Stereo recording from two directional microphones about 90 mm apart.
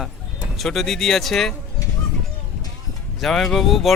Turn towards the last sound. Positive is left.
turn(degrees=0)  # may be behind; listen again after turning